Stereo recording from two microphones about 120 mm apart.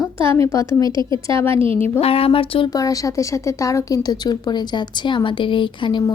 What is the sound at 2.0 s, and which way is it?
Speech, 55° left (ahead or behind).